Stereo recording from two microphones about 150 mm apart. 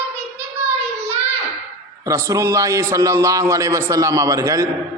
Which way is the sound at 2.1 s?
20° right (ahead or behind).